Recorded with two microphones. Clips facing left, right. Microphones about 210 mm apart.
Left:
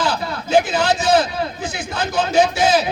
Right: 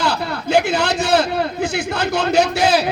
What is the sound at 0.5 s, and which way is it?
A man's voice, 65° right (ahead or behind).